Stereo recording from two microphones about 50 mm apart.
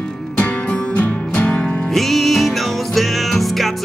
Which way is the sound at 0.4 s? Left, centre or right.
Left.